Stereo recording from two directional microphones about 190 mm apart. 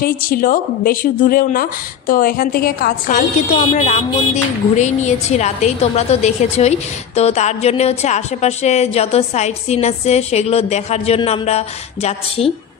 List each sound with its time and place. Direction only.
0.0 s a woman's voice: 50° left (ahead or behind)